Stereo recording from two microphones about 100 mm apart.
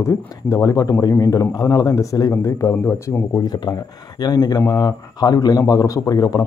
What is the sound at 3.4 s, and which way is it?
Speech, 40° left (ahead or behind).